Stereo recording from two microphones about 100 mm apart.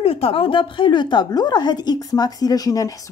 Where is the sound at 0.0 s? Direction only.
70° left (ahead or behind).